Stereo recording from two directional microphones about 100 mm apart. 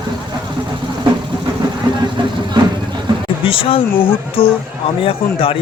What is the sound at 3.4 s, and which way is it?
A man's voice, 65° left (ahead or behind).